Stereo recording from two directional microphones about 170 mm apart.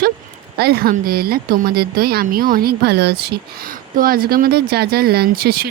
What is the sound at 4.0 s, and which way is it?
Speech, 60° right (ahead or behind).